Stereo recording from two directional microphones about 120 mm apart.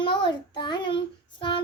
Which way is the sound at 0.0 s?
40° left (ahead or behind).